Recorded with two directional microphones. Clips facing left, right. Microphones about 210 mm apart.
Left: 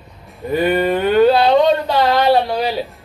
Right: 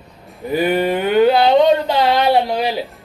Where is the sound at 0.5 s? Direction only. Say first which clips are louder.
Left 1 dB; 10° right (ahead or behind).